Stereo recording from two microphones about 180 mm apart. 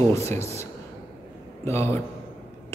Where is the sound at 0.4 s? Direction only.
35° right (ahead or behind).